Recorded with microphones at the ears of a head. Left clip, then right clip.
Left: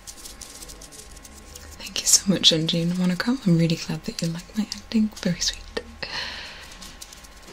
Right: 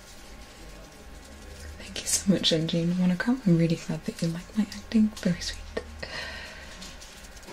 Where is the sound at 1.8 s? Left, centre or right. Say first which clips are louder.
Left 7 dB; left.